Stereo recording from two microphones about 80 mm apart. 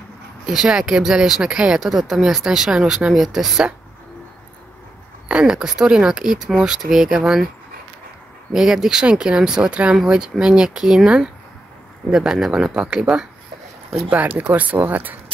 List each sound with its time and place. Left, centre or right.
0.5 s speech: centre
5.3 s speech: centre
8.5 s speech: centre
14.1 s speech: right